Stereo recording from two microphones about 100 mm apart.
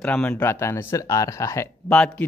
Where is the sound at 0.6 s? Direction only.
30° left (ahead or behind).